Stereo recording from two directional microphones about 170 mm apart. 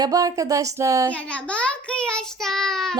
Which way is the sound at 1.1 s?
5° left (ahead or behind).